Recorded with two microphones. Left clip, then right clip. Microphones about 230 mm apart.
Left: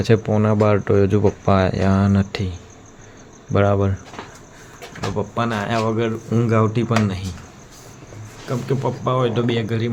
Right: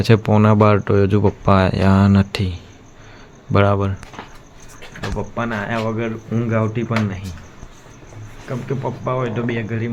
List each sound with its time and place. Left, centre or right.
0.0 s speech: centre
4.9 s speech: centre
8.4 s speech: centre